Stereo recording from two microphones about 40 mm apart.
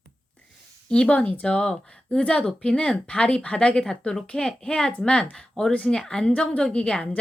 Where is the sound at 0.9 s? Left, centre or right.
Left.